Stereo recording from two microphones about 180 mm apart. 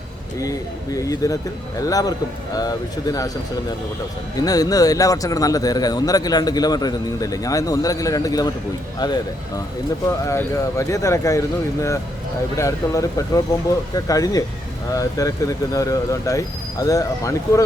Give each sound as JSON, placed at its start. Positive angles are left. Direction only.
{"t": 0.4, "sound": "speech", "side_deg": 20}
{"t": 4.4, "sound": "speech", "side_deg": 20}
{"t": 10.2, "sound": "speech", "side_deg": 15}